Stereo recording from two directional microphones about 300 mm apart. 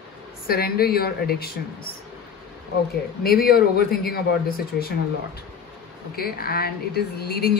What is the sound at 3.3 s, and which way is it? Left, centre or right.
A man's voice, left.